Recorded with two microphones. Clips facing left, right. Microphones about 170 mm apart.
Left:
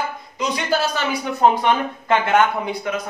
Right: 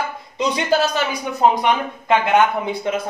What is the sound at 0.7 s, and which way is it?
A man's voice, 15° right (ahead or behind).